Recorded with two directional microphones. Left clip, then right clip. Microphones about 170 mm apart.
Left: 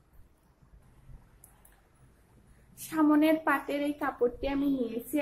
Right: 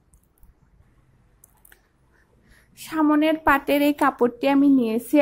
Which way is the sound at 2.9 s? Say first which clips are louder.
Right 5 dB; 35° right (ahead or behind).